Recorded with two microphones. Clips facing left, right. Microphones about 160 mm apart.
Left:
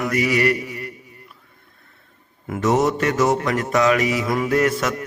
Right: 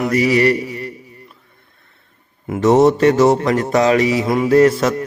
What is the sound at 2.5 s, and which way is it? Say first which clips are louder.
Mantra: right 7 dB; 30° right (ahead or behind).